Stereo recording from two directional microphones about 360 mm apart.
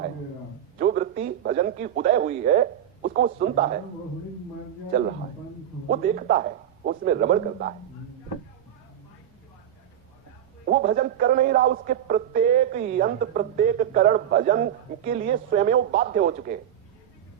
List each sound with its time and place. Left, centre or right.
0.8 s speech: right
5.9 s a man's voice: right
10.7 s a man's voice: right